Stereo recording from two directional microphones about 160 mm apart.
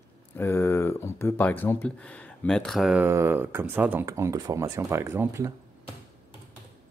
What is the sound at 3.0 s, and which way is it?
Speech, 15° right (ahead or behind).